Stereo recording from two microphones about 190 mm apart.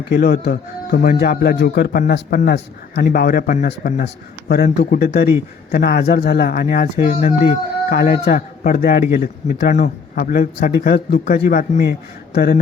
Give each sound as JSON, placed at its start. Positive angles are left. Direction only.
{"t": 0.1, "sound": "speech", "side_deg": 55}
{"t": 4.0, "sound": "speech", "side_deg": 60}
{"t": 10.8, "sound": "speech", "side_deg": 60}
{"t": 11.3, "sound": "speech", "side_deg": 45}